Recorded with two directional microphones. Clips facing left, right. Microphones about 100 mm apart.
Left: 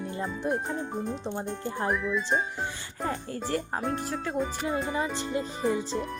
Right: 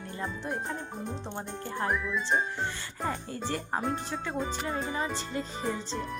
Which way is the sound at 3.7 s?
Centre (ahead or behind).